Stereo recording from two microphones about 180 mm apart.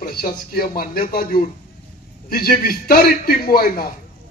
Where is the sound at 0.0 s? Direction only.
55° left (ahead or behind).